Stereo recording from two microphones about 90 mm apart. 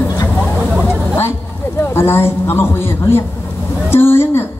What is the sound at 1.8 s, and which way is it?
A man's voice, 25° left (ahead or behind).